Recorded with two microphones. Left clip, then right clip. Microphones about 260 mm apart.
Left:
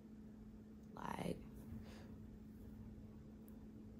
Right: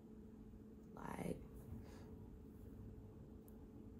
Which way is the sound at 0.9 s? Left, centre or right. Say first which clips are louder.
Left 3 dB; centre.